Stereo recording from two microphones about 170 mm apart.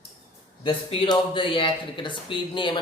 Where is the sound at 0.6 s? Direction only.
25° left (ahead or behind).